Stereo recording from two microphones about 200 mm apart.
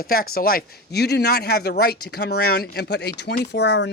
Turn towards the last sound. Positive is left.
turn(degrees=60)  # may be behind; listen again after turning